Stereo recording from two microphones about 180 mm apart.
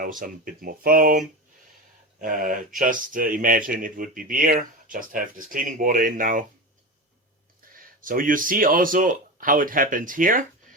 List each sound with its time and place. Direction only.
0.0 s speech: 50° right (ahead or behind)
2.2 s speech: 50° right (ahead or behind)
8.0 s speech: 50° right (ahead or behind)